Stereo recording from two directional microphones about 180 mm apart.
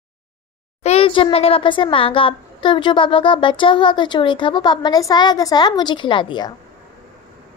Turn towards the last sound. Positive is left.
turn(degrees=25)  # may be behind; listen again after turning